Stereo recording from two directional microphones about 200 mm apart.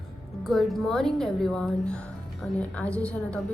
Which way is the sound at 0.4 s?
Centre (ahead or behind).